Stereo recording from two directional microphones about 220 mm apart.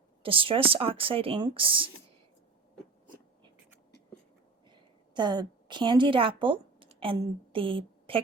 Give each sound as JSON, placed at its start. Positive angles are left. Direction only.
{"t": 0.2, "sound": "speech", "side_deg": -25}
{"t": 4.7, "sound": "a woman's voice", "side_deg": -20}